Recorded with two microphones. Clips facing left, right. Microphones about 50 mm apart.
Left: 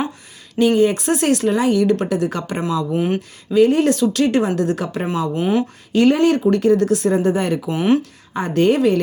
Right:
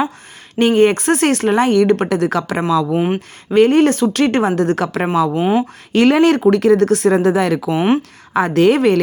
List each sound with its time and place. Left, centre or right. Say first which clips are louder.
0.6 s speech: right 3 dB; right
2.9 s speech: right 3 dB; right
3.2 s speech: right 1 dB; right
5.3 s speech: right 3 dB; right
5.9 s speech: right 3 dB; right
7.7 s speech: left 1 dB; right
8.3 s a woman's voice: right 4 dB; right